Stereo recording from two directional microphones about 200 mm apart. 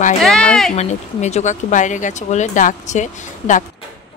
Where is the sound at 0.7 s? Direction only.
35° left (ahead or behind).